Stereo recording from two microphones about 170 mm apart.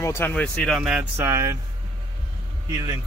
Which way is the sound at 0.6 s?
Centre (ahead or behind).